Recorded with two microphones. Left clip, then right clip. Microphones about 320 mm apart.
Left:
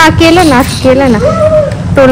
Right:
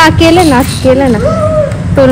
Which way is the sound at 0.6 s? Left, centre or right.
Left.